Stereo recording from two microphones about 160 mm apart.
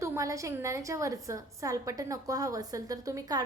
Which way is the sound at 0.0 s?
20° right (ahead or behind).